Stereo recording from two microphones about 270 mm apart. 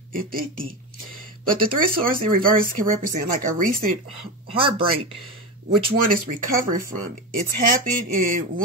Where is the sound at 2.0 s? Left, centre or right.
Right.